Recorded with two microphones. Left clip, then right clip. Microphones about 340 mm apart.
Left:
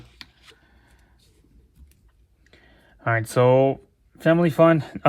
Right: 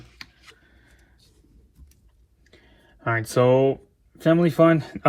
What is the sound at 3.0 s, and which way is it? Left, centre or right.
Speech, centre.